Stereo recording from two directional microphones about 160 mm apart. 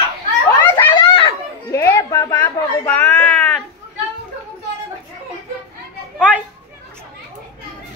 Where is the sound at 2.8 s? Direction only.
10° left (ahead or behind).